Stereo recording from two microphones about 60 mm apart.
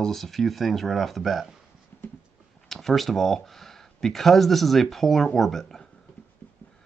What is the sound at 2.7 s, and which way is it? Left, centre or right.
Speech, centre.